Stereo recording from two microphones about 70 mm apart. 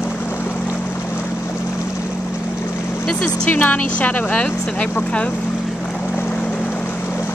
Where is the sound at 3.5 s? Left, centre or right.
Left.